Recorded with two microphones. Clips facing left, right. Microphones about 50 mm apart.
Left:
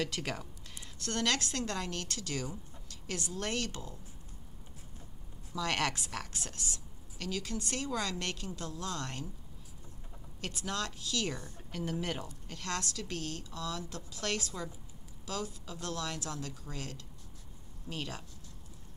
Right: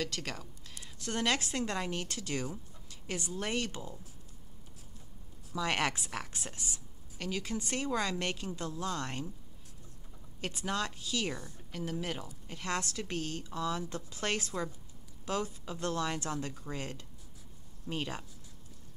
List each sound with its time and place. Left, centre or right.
0.0 s speech: centre
0.9 s a woman's voice: centre
5.5 s a woman's voice: centre
10.4 s a woman's voice: centre
11.7 s a woman's voice: centre